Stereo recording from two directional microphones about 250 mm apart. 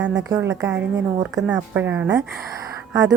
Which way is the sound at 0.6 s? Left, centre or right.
Centre.